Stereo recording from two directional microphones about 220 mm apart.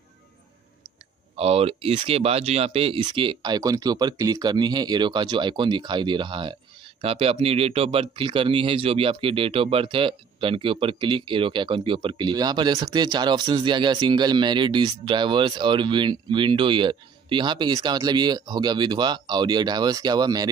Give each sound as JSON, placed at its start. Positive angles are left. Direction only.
{"t": 1.3, "sound": "speech", "side_deg": -25}